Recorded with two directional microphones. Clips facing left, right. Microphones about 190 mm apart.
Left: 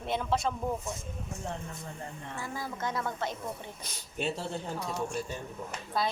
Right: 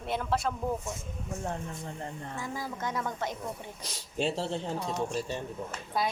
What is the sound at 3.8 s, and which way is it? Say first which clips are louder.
Speech: right 6 dB; 30° right (ahead or behind).